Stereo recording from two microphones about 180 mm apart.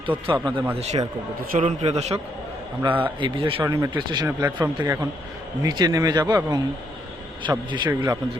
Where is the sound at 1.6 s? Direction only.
35° right (ahead or behind).